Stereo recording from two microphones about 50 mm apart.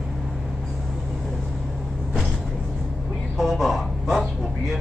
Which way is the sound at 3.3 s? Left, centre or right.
Centre.